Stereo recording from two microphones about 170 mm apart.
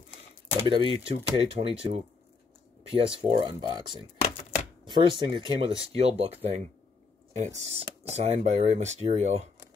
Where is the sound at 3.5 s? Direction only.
25° right (ahead or behind).